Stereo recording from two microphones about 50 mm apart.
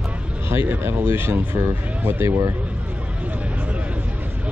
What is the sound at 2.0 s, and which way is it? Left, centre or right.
Speech, right.